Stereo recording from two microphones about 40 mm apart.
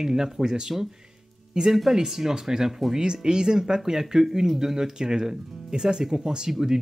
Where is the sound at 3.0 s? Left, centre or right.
Centre.